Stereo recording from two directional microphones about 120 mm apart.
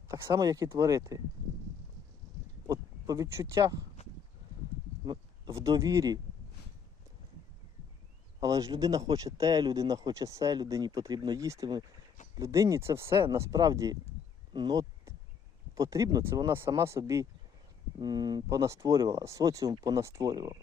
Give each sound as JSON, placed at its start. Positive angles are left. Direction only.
{"t": 0.1, "sound": "speech", "side_deg": -30}
{"t": 2.6, "sound": "a sound", "side_deg": -25}
{"t": 3.5, "sound": "speech", "side_deg": -30}
{"t": 5.5, "sound": "speech", "side_deg": -25}
{"t": 8.4, "sound": "speech", "side_deg": -30}
{"t": 18.0, "sound": "speech", "side_deg": -35}